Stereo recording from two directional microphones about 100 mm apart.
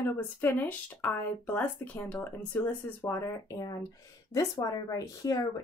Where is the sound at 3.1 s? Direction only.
25° left (ahead or behind).